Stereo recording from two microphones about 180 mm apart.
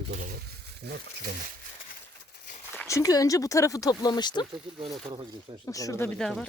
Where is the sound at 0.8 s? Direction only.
65° right (ahead or behind).